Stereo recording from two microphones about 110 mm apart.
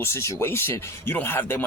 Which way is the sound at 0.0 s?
25° left (ahead or behind).